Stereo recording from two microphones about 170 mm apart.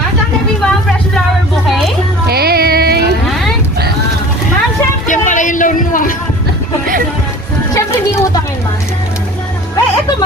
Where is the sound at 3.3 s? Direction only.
Centre (ahead or behind).